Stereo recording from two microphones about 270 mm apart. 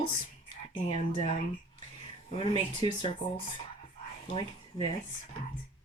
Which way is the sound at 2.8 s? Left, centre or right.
Centre.